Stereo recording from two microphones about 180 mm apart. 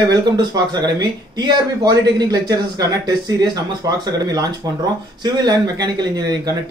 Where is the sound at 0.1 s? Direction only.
25° right (ahead or behind).